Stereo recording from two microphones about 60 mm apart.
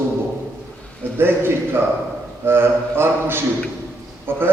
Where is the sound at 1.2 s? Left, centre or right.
Right.